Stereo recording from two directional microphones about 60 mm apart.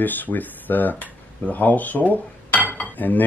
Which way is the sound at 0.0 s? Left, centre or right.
Left.